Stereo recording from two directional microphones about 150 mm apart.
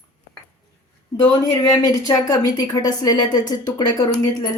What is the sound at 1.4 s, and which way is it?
Speech, 25° left (ahead or behind).